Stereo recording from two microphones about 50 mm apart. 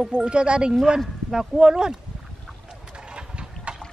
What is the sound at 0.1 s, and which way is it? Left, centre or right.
Speech, centre.